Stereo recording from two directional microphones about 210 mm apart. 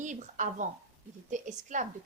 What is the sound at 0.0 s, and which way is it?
A woman's voice, 35° right (ahead or behind).